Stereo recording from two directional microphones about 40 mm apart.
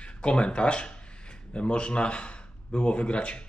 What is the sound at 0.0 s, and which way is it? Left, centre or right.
A man's voice, left.